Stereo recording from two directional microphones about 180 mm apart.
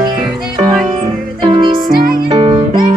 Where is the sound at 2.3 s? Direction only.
35° right (ahead or behind).